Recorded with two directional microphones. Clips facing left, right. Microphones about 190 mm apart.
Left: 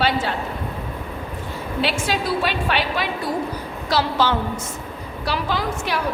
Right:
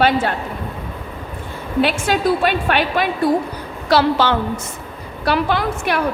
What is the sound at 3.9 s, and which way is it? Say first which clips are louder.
A woman's voice: right 5 dB; 65° right (ahead or behind).